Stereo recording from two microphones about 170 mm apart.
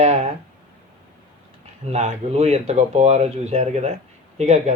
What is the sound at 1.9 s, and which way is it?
Speech, 40° right (ahead or behind).